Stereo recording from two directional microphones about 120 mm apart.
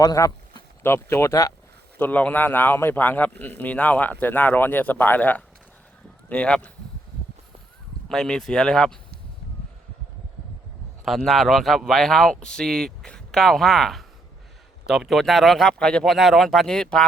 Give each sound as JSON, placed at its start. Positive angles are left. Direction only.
{"t": 0.0, "sound": "speech", "side_deg": 30}
{"t": 2.0, "sound": "a man's voice", "side_deg": 15}
{"t": 8.1, "sound": "speech", "side_deg": 5}
{"t": 11.0, "sound": "speech", "side_deg": 0}